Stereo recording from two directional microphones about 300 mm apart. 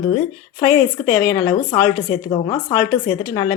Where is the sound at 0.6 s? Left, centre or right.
Centre.